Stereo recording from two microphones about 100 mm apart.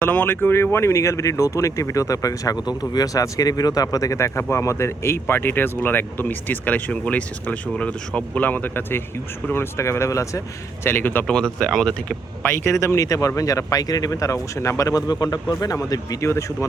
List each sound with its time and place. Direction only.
0.0 s speech: 20° left (ahead or behind)
10.8 s speech: 20° left (ahead or behind)
11.3 s speech: 5° left (ahead or behind)
12.4 s speech: 25° left (ahead or behind)